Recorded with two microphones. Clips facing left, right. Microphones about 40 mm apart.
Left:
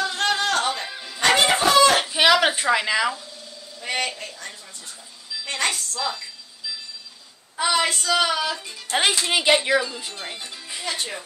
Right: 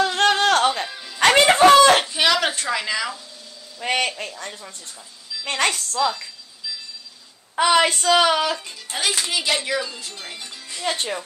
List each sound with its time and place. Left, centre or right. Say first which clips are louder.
0.0 s a sound: right 5 dB; right
0.8 s music: even; centre
1.2 s a sound: right 3 dB; right
1.7 s chicken: right 3 dB; right
2.1 s a sound: left 2 dB; centre
3.8 s a man's voice: right 4 dB; right
5.9 s speech: right 6 dB; centre
7.5 s a woman's voice: right 5 dB; right
8.9 s a child's voice: left 3 dB; left; by 10.9 s centre